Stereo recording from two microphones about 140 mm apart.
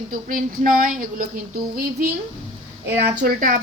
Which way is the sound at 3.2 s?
85° right.